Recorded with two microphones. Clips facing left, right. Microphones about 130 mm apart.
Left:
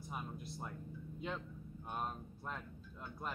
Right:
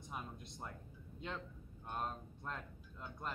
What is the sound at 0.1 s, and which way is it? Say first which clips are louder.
Speech: left 2 dB; 5° left (ahead or behind).